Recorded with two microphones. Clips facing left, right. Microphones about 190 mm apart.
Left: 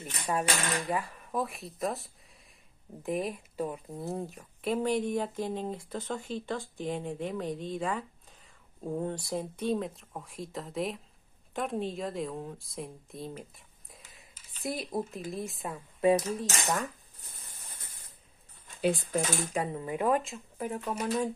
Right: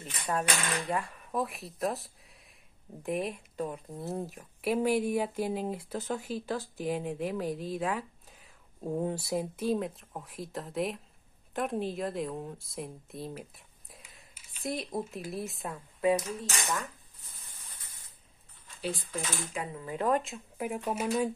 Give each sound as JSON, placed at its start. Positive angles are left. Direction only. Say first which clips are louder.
{"t": 0.3, "sound": "a woman's voice", "louder": "left 1 dB", "side_deg": 5}
{"t": 14.6, "sound": "a woman's voice", "louder": "left 1 dB", "side_deg": 0}
{"t": 16.0, "sound": "cutlery", "louder": "left 3 dB", "side_deg": 30}
{"t": 19.1, "sound": "cutlery", "louder": "left 6 dB", "side_deg": 40}
{"t": 19.8, "sound": "speech", "louder": "even", "side_deg": 15}
{"t": 20.2, "sound": "speech", "louder": "even", "side_deg": -5}